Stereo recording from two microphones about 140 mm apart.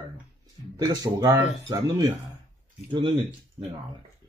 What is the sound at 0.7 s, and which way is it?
Speech, 30° right (ahead or behind).